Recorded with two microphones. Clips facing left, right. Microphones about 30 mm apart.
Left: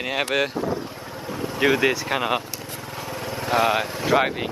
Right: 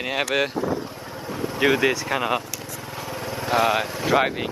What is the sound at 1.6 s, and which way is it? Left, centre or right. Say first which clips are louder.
Speech: even; centre.